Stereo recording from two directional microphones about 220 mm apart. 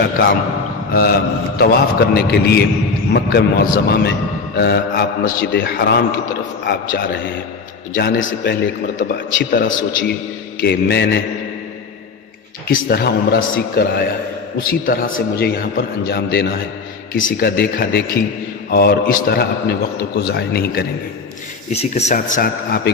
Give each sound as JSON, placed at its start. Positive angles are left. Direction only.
{"t": 0.9, "sound": "a man's voice", "side_deg": 45}
{"t": 12.6, "sound": "a man's voice", "side_deg": 45}
{"t": 21.7, "sound": "speech", "side_deg": 30}